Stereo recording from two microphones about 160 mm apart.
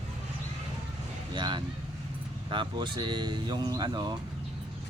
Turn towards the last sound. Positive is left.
turn(degrees=-25)  # may be behind; listen again after turning